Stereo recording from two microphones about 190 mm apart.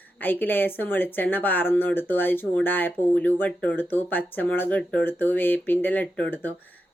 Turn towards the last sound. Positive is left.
turn(degrees=10)  # may be behind; listen again after turning